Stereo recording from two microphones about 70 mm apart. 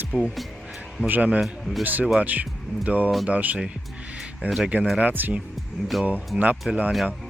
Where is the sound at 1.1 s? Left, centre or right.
Right.